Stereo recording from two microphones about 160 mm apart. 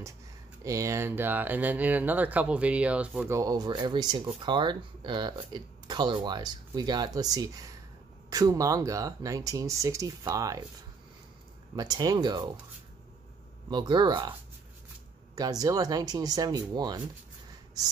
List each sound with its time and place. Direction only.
0.7 s speech: 20° right (ahead or behind)
3.3 s speech: 25° right (ahead or behind)
11.7 s speech: 25° right (ahead or behind)
13.7 s speech: 30° right (ahead or behind)
15.3 s speech: 25° right (ahead or behind)